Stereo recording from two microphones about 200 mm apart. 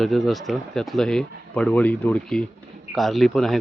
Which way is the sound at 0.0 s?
Centre (ahead or behind).